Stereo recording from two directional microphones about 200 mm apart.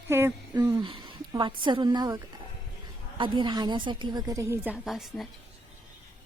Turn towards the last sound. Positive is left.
turn(degrees=0)  # may be behind; listen again after turning